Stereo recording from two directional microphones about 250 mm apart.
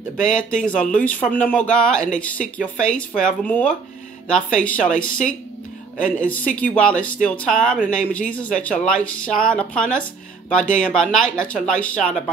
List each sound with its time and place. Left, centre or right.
0.2 s speech: centre